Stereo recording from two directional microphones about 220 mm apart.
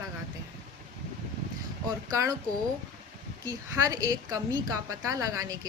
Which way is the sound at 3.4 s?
15° right (ahead or behind).